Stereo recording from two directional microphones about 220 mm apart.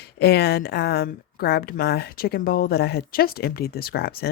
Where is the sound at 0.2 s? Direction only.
45° left (ahead or behind).